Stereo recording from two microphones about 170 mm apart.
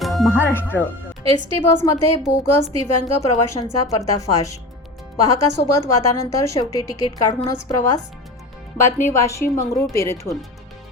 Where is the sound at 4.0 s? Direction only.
20° left (ahead or behind).